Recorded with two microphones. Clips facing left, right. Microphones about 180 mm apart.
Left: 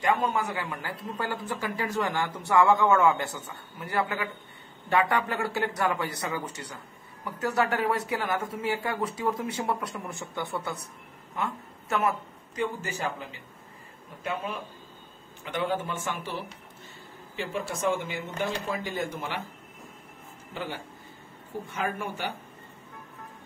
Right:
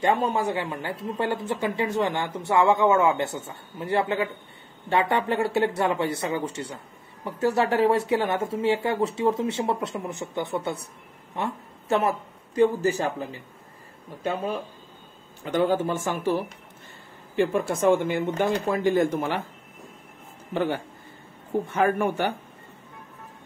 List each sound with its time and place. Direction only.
0.0 s a man's voice: 30° right (ahead or behind); by 19.4 s 50° right (ahead or behind)
20.5 s speech: 55° right (ahead or behind)